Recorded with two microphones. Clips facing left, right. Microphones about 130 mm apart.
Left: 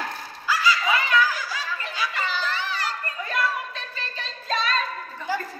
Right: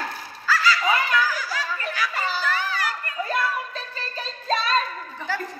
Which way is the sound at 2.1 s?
40° right (ahead or behind).